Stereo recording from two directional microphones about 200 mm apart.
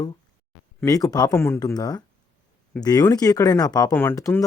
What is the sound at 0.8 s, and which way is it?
Speech, 15° left (ahead or behind).